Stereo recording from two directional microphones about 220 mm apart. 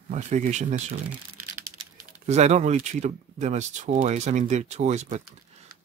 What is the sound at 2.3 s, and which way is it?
Speech, 30° right (ahead or behind).